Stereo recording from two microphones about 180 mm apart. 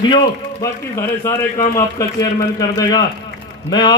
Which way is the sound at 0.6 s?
15° left (ahead or behind).